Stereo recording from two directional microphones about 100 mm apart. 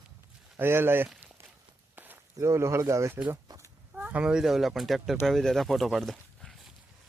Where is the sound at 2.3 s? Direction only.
30° right (ahead or behind).